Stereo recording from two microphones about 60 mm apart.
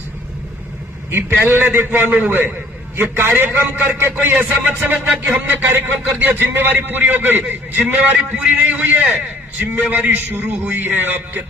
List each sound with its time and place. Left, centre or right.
1.1 s a man's voice: right